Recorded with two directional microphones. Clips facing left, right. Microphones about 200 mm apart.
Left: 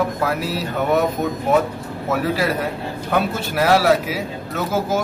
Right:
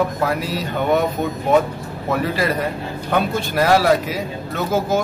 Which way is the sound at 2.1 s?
5° left (ahead or behind).